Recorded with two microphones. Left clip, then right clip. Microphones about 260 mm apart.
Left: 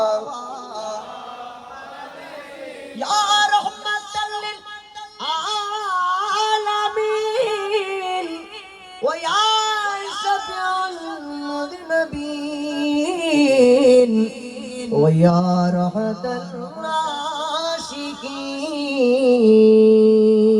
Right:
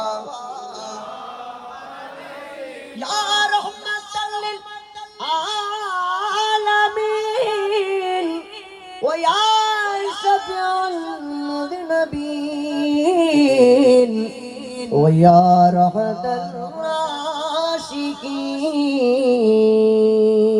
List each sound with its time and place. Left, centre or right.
3.0 s music: centre
4.1 s music: centre
5.2 s music: right
9.0 s a sound: right
14.9 s mantra: right